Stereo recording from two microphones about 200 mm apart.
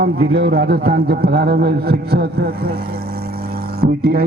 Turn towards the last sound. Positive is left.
turn(degrees=-50)  # may be behind; listen again after turning